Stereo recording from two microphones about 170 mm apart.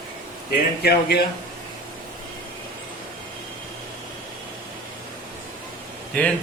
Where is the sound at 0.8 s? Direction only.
70° left (ahead or behind).